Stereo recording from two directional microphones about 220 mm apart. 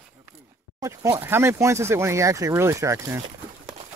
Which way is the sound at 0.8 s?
15° right (ahead or behind).